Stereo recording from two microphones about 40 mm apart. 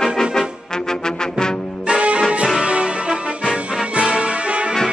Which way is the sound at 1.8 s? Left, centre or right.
Right.